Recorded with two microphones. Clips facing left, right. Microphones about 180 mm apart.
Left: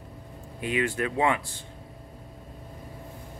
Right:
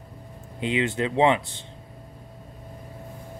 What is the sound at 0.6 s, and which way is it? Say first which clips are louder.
Speech: right 3 dB; 25° right (ahead or behind).